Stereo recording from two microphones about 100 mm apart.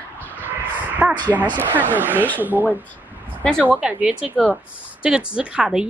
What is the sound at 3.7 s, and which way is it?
Speech, 15° right (ahead or behind).